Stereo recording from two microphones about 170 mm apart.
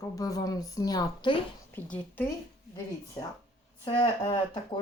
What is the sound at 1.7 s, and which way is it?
Speech, 10° left (ahead or behind).